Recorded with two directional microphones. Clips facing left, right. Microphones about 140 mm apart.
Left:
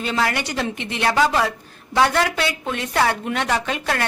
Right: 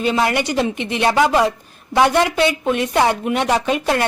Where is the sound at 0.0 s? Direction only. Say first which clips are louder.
Right 5 dB; 20° right (ahead or behind).